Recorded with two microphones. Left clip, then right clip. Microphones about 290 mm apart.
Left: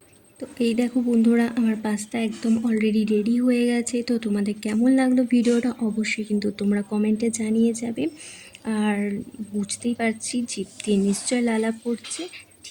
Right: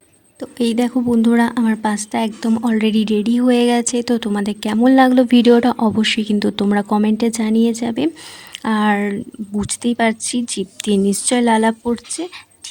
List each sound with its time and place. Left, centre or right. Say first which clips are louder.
0.3 s speech: right 5 dB; right